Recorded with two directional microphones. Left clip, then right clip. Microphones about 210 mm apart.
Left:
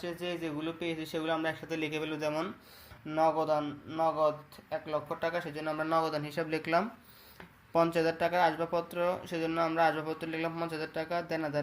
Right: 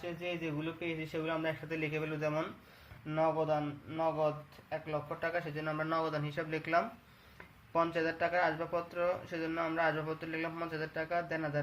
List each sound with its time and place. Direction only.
0.0 s speech: 45° left (ahead or behind)